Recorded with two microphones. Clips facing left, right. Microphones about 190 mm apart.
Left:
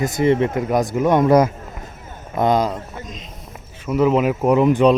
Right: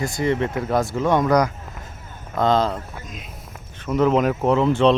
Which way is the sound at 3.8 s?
5° left (ahead or behind).